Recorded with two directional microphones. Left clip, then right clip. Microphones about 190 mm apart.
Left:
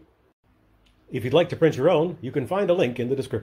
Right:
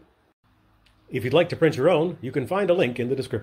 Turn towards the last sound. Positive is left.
turn(degrees=0)  # may be behind; listen again after turning